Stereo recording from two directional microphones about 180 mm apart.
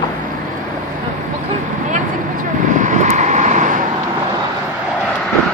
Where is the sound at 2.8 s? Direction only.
45° right (ahead or behind).